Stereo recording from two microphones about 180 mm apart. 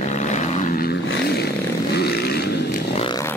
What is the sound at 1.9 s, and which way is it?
Vehicle, 65° left (ahead or behind).